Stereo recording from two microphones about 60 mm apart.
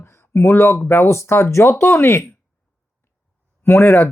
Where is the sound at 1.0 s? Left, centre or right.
Left.